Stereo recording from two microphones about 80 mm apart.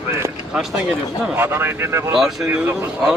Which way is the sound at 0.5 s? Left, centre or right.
Centre.